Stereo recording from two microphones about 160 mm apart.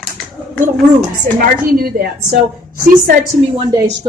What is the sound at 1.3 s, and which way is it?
A woman's voice, 65° right (ahead or behind).